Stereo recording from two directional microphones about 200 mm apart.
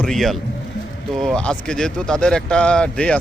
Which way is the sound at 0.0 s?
Centre (ahead or behind).